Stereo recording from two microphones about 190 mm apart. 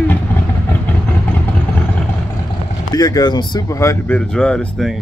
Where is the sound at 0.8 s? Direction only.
10° left (ahead or behind).